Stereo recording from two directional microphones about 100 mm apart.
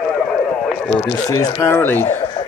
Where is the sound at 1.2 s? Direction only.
35° left (ahead or behind).